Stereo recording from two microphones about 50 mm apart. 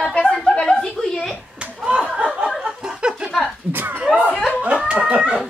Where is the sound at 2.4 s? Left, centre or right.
Centre.